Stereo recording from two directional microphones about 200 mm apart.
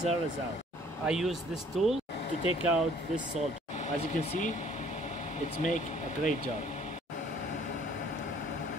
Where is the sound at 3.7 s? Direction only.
35° left (ahead or behind).